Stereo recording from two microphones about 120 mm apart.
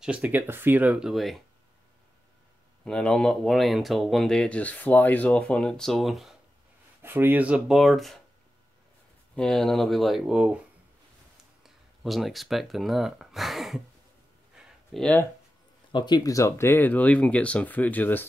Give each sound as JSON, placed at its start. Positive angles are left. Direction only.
{"t": 0.0, "sound": "speech", "side_deg": -10}
{"t": 2.8, "sound": "speech", "side_deg": 5}
{"t": 7.0, "sound": "speech", "side_deg": -20}
{"t": 9.3, "sound": "speech", "side_deg": 5}
{"t": 11.6, "sound": "speech", "side_deg": 0}
{"t": 14.6, "sound": "a sound", "side_deg": -5}
{"t": 15.0, "sound": "speech", "side_deg": 10}
{"t": 15.9, "sound": "speech", "side_deg": 35}